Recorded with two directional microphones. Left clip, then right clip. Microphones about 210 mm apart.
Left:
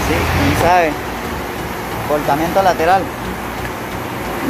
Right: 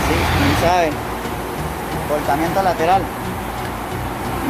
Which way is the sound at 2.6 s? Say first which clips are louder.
Left 3 dB; 10° left (ahead or behind).